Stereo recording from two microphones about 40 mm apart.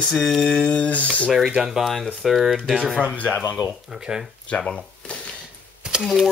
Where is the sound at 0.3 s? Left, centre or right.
Centre.